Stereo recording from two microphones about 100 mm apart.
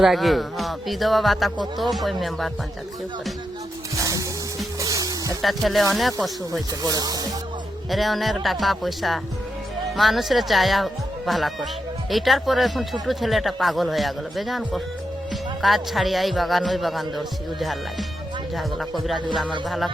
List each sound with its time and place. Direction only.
0.0 s speech: centre (ahead or behind)
3.9 s music: 35° right (ahead or behind)
5.4 s speech: centre (ahead or behind)
6.5 s speech: 40° right (ahead or behind)
7.9 s speech: centre (ahead or behind)